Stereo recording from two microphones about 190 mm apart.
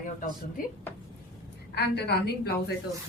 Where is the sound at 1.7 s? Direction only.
60° left (ahead or behind).